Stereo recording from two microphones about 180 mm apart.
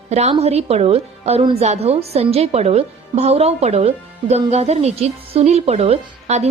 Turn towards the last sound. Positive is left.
turn(degrees=-40)  # may be behind; listen again after turning